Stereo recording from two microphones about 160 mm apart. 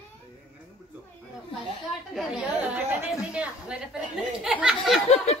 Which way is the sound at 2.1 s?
5° right (ahead or behind).